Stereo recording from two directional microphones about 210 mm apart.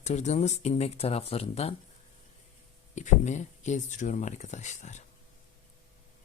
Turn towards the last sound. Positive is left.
turn(degrees=35)  # may be behind; listen again after turning